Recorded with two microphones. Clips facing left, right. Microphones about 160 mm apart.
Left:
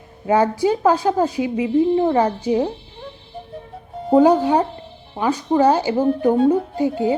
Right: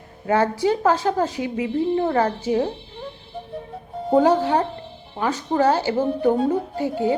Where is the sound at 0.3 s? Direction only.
15° left (ahead or behind).